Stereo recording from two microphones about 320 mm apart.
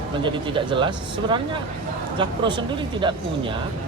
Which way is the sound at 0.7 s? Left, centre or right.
Centre.